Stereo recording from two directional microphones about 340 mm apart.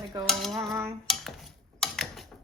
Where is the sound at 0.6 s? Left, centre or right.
Centre.